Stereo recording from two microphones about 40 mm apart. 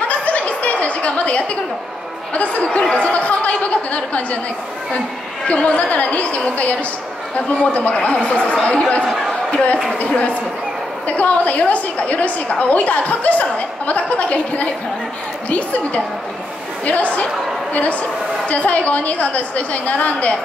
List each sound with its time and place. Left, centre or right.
0.1 s chuckle: left
2.3 s a woman's voice: left
5.5 s a woman's voice: left
9.0 s speech: centre
9.9 s a woman's voice: left
18.4 s a woman's voice: left